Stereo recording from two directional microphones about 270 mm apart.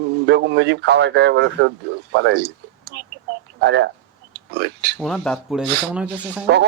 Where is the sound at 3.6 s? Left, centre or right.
Right.